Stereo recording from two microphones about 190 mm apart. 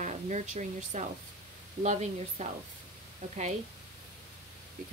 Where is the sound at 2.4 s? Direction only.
40° right (ahead or behind).